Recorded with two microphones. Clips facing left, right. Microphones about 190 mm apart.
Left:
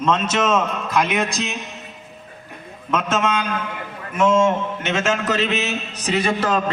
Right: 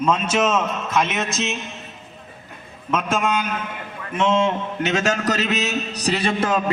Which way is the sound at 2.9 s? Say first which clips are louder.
Left 1 dB; 10° right (ahead or behind).